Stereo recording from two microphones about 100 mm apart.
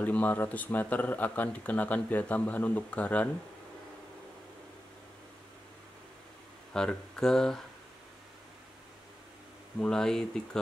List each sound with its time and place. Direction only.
0.0 s speech: 15° left (ahead or behind)
6.7 s speech: 5° left (ahead or behind)
9.8 s speech: 5° left (ahead or behind)